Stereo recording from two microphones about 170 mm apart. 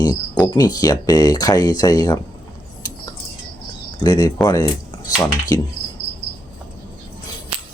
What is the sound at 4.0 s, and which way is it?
Speech, 20° left (ahead or behind).